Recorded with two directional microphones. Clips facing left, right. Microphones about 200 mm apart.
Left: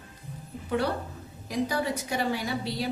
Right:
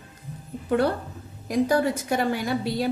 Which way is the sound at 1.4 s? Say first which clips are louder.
Right 7 dB; 50° right (ahead or behind).